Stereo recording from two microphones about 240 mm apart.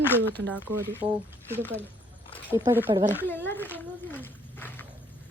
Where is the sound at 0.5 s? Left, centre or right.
Centre.